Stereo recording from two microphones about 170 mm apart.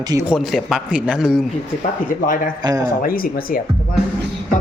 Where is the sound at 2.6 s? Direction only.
20° right (ahead or behind).